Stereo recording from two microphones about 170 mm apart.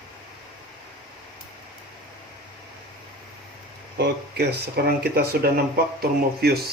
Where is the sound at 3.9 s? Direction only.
75° right (ahead or behind).